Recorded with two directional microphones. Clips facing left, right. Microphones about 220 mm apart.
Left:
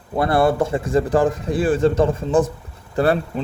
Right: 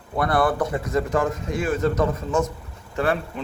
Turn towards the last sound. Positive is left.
turn(degrees=35)  # may be behind; listen again after turning